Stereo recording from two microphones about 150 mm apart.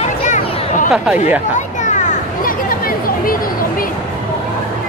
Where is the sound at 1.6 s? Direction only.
55° left (ahead or behind); by 3.3 s 70° left (ahead or behind).